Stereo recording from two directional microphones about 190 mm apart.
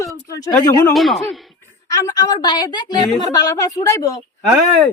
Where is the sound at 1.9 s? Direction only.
20° left (ahead or behind).